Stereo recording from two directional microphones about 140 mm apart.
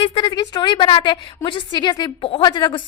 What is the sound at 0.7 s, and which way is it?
Speech, 45° left (ahead or behind).